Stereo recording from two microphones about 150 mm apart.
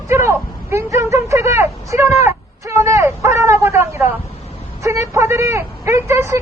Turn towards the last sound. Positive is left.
turn(degrees=-20)  # may be behind; listen again after turning